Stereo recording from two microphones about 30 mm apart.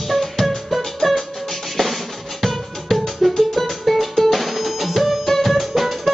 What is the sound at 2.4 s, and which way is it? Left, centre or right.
Music, centre.